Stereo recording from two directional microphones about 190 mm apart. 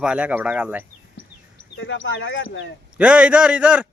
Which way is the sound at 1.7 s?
75° left (ahead or behind).